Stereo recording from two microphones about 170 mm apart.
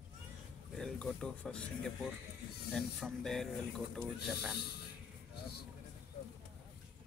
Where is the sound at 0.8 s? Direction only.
Centre (ahead or behind).